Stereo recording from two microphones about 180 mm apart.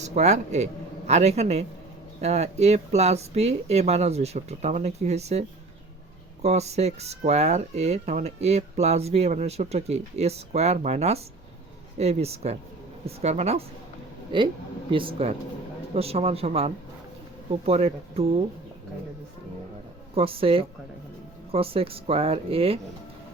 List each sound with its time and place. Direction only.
0.0 s speech: 40° right (ahead or behind)
20.1 s speech: 30° right (ahead or behind)